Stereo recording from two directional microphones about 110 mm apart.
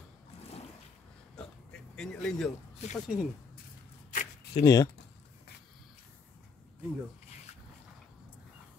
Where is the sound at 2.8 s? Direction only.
80° left.